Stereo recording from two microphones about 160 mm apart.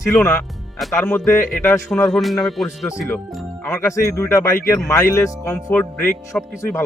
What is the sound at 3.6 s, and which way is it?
Speech, 20° left (ahead or behind).